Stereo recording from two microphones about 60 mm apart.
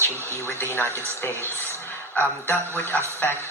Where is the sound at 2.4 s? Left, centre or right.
Left.